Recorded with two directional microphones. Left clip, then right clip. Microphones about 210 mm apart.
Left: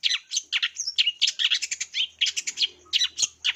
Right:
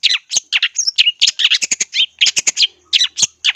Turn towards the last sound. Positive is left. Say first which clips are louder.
# right 10 dB
turn(degrees=-25)  # may be behind; listen again after turning